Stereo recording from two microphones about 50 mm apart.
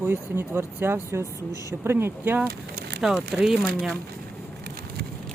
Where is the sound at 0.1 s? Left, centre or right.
Right.